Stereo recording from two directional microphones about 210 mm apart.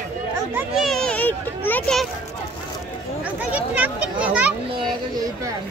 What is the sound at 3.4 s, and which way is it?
Speech, 5° right (ahead or behind).